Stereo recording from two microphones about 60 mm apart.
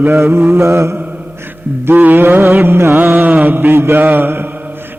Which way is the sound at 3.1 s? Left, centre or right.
Right.